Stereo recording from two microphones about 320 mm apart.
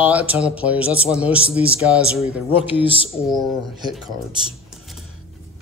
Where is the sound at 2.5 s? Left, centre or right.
Centre.